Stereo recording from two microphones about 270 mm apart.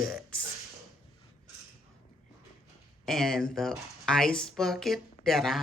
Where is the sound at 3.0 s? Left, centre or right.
Centre.